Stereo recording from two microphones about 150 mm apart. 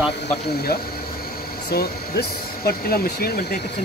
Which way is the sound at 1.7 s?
90° left.